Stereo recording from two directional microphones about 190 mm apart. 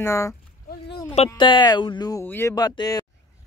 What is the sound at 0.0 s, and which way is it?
Speech, 15° left (ahead or behind).